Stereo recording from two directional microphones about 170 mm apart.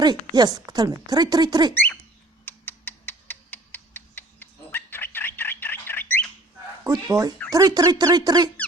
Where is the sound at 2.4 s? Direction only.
10° left (ahead or behind).